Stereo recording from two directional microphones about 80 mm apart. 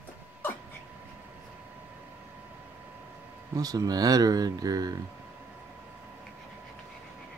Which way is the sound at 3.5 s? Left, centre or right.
Right.